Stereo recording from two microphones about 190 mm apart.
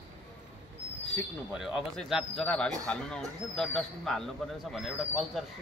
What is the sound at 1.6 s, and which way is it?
Speech, centre (ahead or behind).